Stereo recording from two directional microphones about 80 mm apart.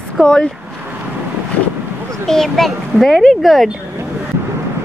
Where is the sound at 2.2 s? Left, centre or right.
Centre.